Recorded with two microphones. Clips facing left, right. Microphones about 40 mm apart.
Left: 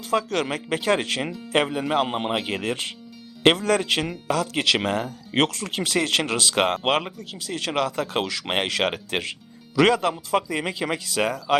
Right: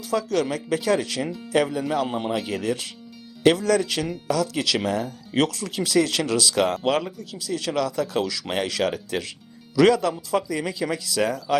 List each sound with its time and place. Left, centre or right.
0.0 s speech: left